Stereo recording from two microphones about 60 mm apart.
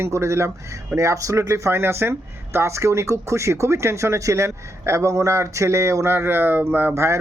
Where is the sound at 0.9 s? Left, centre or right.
Right.